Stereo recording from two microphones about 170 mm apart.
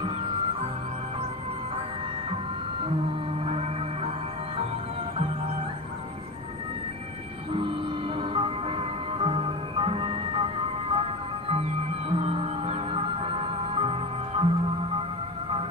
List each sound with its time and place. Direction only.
3.4 s music: 35° right (ahead or behind)
8.2 s music: 30° right (ahead or behind)